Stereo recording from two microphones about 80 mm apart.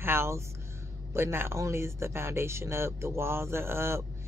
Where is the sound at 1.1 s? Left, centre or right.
Right.